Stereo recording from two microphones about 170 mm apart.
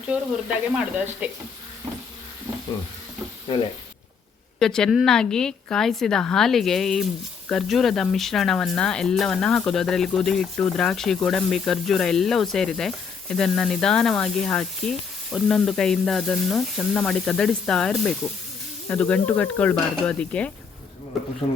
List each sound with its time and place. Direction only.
0.1 s speech: 5° right (ahead or behind)
3.5 s speech: 30° left (ahead or behind)
4.6 s a woman's voice: 5° left (ahead or behind)
18.9 s sizzle: 5° left (ahead or behind)